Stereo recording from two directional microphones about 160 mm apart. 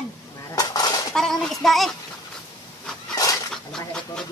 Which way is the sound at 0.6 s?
25° left (ahead or behind).